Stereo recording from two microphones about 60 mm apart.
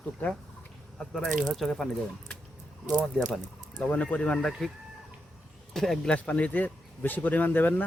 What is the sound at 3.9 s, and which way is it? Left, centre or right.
Speech, left.